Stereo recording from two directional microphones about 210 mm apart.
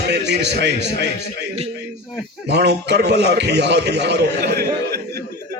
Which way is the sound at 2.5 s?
50° right (ahead or behind).